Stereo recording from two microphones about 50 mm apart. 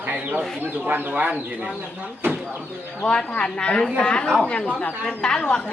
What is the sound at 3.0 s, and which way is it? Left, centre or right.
A woman's voice, centre.